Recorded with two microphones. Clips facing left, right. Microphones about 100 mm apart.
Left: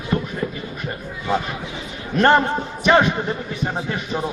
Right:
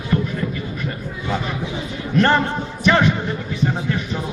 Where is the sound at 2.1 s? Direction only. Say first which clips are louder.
Left 1 dB; 20° left (ahead or behind).